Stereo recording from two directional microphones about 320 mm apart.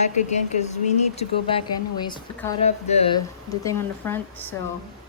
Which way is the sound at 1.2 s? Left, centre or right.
Centre.